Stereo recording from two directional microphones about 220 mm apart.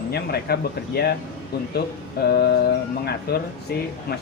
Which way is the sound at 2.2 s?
45° left (ahead or behind).